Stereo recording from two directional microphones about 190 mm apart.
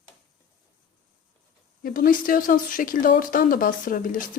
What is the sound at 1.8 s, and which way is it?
Speech, 50° left (ahead or behind).